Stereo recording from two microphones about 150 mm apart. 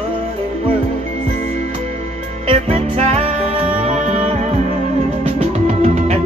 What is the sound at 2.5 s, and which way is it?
Music, 45° right (ahead or behind).